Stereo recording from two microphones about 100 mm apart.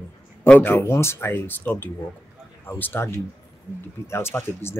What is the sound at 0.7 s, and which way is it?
Speech, 25° left (ahead or behind).